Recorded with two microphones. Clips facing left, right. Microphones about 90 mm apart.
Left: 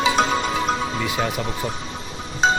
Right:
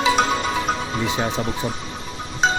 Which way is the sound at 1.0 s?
25° right (ahead or behind).